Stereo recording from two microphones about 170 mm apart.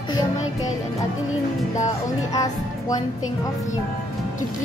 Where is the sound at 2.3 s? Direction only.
20° left (ahead or behind).